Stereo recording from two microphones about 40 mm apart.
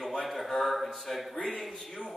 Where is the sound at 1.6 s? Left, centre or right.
Centre.